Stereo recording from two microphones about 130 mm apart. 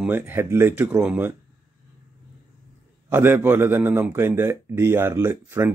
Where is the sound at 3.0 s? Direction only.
20° right (ahead or behind).